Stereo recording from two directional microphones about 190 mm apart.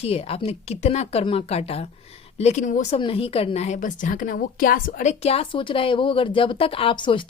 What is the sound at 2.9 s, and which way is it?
A woman's voice, 30° left (ahead or behind).